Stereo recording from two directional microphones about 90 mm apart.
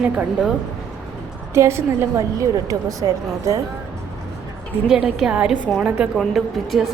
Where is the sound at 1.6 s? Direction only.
30° right (ahead or behind).